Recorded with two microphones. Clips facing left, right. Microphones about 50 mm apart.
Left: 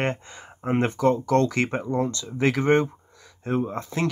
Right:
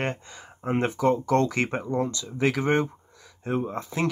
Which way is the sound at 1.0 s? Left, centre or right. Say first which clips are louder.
Left 1 dB; centre.